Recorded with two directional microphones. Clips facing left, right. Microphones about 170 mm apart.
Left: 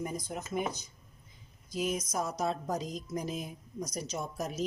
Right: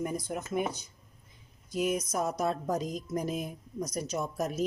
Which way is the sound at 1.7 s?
60° right (ahead or behind).